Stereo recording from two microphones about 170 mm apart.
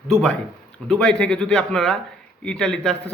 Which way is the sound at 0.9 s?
5° left (ahead or behind).